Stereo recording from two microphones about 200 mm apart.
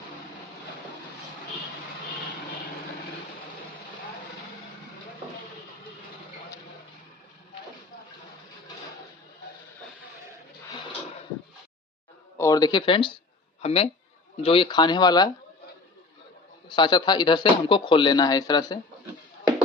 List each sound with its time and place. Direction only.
12.4 s speech: 20° left (ahead or behind)
16.6 s speech: 20° left (ahead or behind)